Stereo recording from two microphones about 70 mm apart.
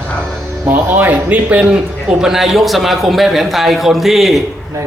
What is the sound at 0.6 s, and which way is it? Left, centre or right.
Speech, right.